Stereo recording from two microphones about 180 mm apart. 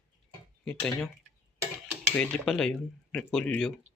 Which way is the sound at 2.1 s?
5° left (ahead or behind).